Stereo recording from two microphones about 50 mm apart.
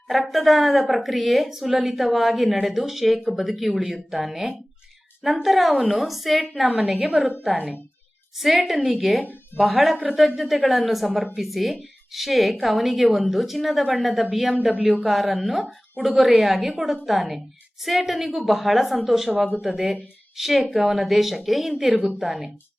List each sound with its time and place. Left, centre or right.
0.1 s a woman's voice: centre
8.4 s a woman's voice: centre